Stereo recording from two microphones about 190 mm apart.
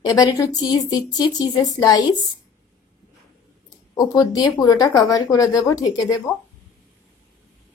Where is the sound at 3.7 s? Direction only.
20° left (ahead or behind).